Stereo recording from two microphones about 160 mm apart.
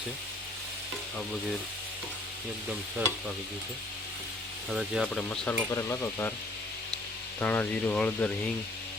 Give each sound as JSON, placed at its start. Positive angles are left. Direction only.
{"t": 4.7, "sound": "speech", "side_deg": 0}
{"t": 5.5, "sound": "speech", "side_deg": 20}
{"t": 7.3, "sound": "speech", "side_deg": 10}